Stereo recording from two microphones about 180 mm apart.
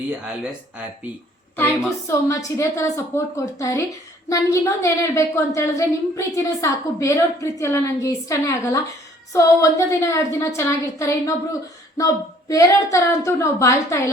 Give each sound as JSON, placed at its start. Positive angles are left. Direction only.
{"t": 1.5, "sound": "a woman's voice", "side_deg": 10}